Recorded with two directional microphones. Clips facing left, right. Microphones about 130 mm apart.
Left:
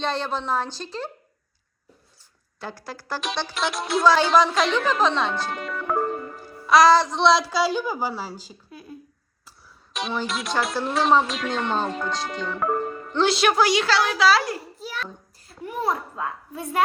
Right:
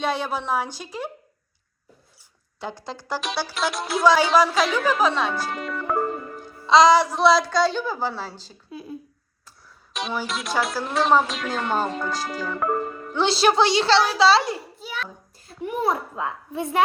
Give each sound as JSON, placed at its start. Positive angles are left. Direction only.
{"t": 0.0, "sound": "a woman's voice", "side_deg": -10}
{"t": 2.6, "sound": "a woman's voice", "side_deg": -20}
{"t": 3.2, "sound": "a woman's voice", "side_deg": -5}
{"t": 6.7, "sound": "a woman's voice", "side_deg": -20}
{"t": 9.9, "sound": "a woman's voice", "side_deg": 0}
{"t": 13.2, "sound": "a woman's voice", "side_deg": -30}
{"t": 14.8, "sound": "a woman's voice", "side_deg": 0}
{"t": 15.4, "sound": "a child's voice", "side_deg": -20}